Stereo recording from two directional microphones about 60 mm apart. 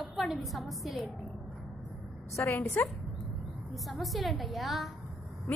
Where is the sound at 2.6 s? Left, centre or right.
Left.